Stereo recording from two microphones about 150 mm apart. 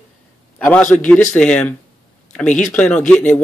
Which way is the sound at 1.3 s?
10° left (ahead or behind).